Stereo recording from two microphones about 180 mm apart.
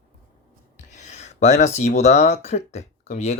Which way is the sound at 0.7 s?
40° left (ahead or behind).